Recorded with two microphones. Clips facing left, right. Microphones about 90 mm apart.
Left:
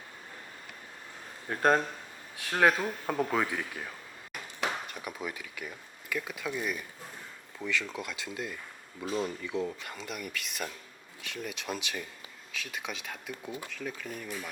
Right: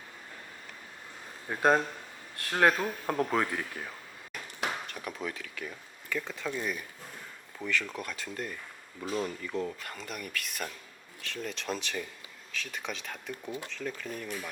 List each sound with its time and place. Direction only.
1.5 s speech: 5° right (ahead or behind)
7.6 s speech: 15° right (ahead or behind)
8.0 s speech: 15° left (ahead or behind)
9.4 s speech: 5° left (ahead or behind)
13.5 s speech: 15° left (ahead or behind)
13.7 s speech: 5° left (ahead or behind)